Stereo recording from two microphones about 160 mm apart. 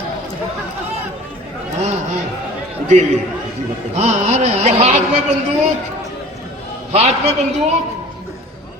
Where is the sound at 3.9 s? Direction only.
45° right (ahead or behind).